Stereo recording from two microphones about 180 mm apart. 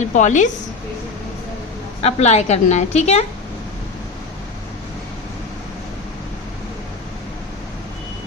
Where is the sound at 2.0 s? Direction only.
35° left (ahead or behind).